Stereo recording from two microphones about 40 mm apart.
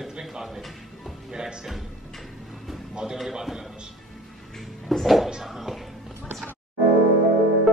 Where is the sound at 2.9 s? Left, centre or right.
Centre.